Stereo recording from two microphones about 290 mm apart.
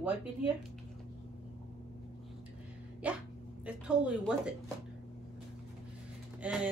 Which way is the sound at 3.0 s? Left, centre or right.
Centre.